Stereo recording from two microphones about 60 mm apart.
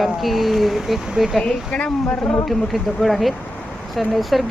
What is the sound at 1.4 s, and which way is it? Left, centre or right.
A woman's voice, centre.